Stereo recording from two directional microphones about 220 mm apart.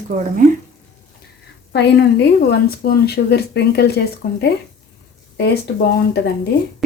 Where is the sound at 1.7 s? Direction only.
50° left (ahead or behind).